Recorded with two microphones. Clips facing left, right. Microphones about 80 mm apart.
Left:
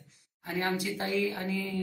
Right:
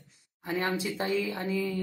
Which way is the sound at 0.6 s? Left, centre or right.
Right.